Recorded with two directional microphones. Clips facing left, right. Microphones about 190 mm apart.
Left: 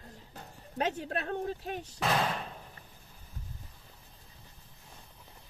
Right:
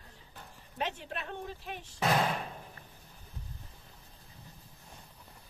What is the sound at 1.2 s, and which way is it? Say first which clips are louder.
Speech: left 7 dB; 45° left (ahead or behind).